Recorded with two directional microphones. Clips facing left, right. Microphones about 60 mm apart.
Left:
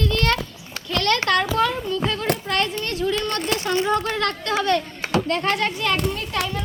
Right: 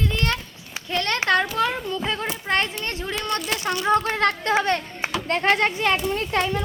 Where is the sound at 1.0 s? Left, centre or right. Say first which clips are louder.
Left 1 dB; right.